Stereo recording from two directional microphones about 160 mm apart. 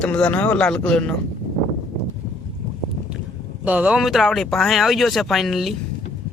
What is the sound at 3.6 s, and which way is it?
Speech, 10° right (ahead or behind).